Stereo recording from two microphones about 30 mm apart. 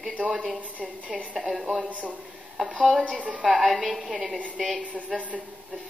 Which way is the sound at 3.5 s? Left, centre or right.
Centre.